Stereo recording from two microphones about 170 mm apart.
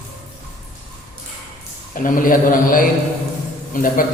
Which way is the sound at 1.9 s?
55° left (ahead or behind).